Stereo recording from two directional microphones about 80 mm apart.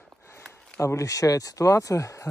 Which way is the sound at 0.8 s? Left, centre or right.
Left.